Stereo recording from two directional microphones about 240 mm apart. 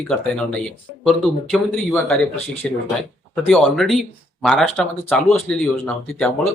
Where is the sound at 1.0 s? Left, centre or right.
Centre.